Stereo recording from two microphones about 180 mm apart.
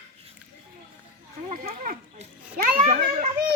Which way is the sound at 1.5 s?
45° right (ahead or behind).